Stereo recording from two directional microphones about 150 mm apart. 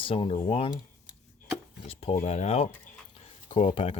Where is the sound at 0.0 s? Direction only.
35° left (ahead or behind).